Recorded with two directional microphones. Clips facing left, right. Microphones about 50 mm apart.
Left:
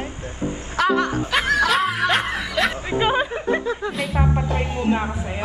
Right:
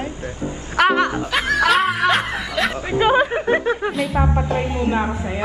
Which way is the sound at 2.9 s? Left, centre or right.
Right.